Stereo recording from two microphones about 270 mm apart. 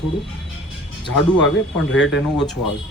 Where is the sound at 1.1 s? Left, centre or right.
Left.